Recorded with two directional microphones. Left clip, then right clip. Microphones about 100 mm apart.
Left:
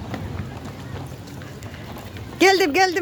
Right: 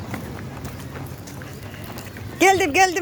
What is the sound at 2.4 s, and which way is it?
Speech, 55° left (ahead or behind).